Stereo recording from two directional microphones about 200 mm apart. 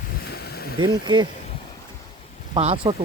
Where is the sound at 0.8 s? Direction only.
20° right (ahead or behind).